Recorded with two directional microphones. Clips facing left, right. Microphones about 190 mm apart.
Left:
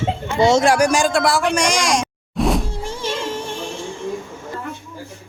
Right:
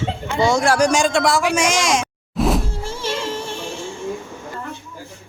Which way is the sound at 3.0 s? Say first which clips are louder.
Even; 15° left (ahead or behind).